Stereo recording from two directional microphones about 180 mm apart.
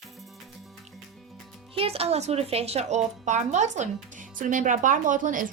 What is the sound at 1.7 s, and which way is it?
A woman's voice, 35° right (ahead or behind).